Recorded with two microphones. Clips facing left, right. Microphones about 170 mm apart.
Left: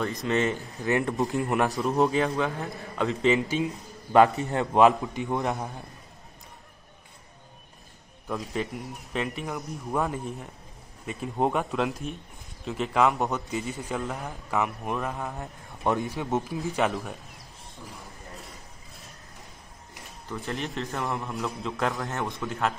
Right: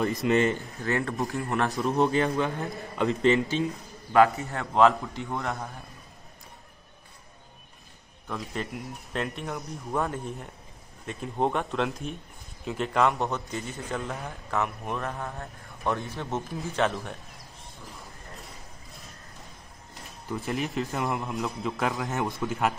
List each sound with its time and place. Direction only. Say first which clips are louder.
0.0 s a man's voice: right 3 dB; 5° right (ahead or behind)
0.7 s a man's voice: left 3 dB; 20° left (ahead or behind)
1.8 s a man's voice: right 2 dB; centre (ahead or behind)
4.1 s a man's voice: left 2 dB; 20° left (ahead or behind)
8.3 s a man's voice: left 3 dB; centre (ahead or behind)
15.3 s a man's voice: left 2 dB; 15° left (ahead or behind)
16.4 s a man's voice: left 1 dB; 5° left (ahead or behind)
20.2 s a man's voice: right 2 dB; 10° right (ahead or behind)